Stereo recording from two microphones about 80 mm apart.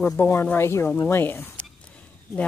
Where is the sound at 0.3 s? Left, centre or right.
Left.